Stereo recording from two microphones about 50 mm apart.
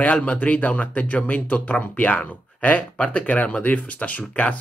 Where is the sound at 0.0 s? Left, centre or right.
Left.